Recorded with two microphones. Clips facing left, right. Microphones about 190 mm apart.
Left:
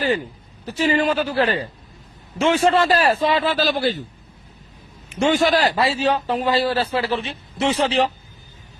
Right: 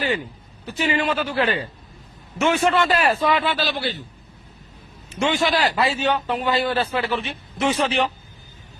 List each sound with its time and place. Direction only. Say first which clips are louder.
0.6 s a man's voice: left 4 dB; 40° left (ahead or behind)
5.2 s a man's voice: left 3 dB; 45° left (ahead or behind)